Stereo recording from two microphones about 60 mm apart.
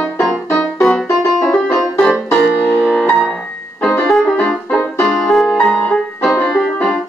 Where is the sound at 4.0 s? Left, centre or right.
Centre.